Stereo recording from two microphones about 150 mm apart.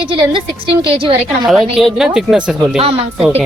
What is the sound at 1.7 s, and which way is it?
Speech, 5° right (ahead or behind).